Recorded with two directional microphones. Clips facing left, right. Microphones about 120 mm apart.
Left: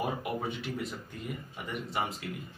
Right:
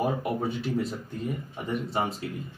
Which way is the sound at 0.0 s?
35° right (ahead or behind).